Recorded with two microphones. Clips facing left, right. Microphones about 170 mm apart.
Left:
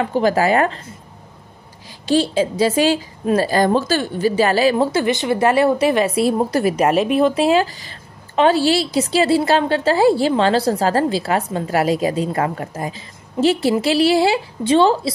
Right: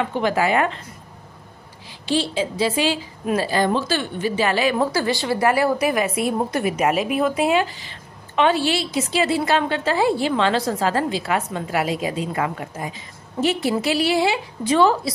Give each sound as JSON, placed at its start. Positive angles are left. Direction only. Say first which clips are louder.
{"t": 0.0, "sound": "a woman's voice", "louder": "left 4 dB", "side_deg": 40}
{"t": 2.0, "sound": "a woman's voice", "louder": "left 5 dB", "side_deg": 45}